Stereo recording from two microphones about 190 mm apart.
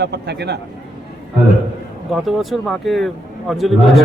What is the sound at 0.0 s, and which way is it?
Speech, 60° right (ahead or behind).